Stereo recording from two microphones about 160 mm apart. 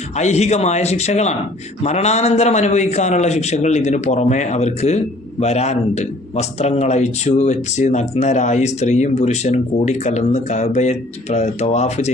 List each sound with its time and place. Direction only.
0.2 s a man's voice: 45° left (ahead or behind)